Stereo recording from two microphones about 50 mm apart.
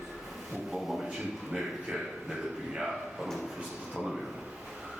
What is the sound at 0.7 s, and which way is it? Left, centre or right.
A man's voice, centre.